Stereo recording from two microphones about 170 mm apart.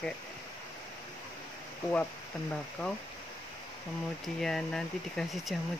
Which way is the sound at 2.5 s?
5° left (ahead or behind).